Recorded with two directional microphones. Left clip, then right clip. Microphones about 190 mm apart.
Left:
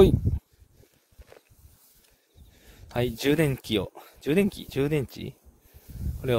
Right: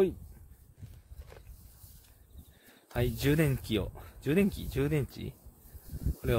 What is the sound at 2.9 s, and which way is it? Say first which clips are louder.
Speech: left 5 dB; 40° left (ahead or behind).